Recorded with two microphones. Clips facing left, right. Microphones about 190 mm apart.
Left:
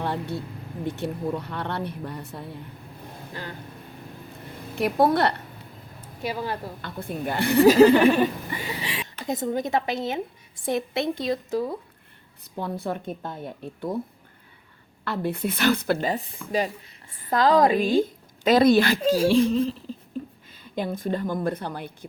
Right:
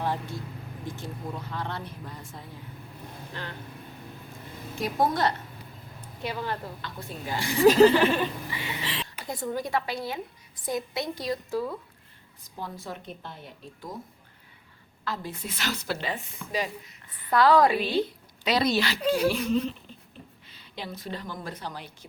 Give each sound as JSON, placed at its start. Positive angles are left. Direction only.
{"t": 0.0, "sound": "vehicle", "side_deg": 65}
{"t": 0.9, "sound": "speech", "side_deg": 65}
{"t": 4.7, "sound": "a woman's voice", "side_deg": 65}
{"t": 6.2, "sound": "chuckle", "side_deg": 10}
{"t": 6.8, "sound": "speech", "side_deg": 55}
{"t": 7.7, "sound": "chuckle", "side_deg": 10}
{"t": 8.4, "sound": "speech", "side_deg": 40}
{"t": 8.8, "sound": "chuckle", "side_deg": 10}
{"t": 9.2, "sound": "a woman's voice", "side_deg": 20}
{"t": 12.4, "sound": "speech", "side_deg": 60}
{"t": 15.0, "sound": "a woman's voice", "side_deg": 60}
{"t": 19.1, "sound": "speech", "side_deg": 30}
{"t": 20.7, "sound": "a woman's voice", "side_deg": 50}